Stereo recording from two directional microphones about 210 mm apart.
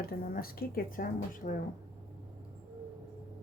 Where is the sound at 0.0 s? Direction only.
45° left (ahead or behind).